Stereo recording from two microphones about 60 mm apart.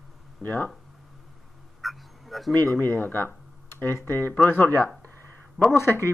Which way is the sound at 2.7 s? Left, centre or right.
Left.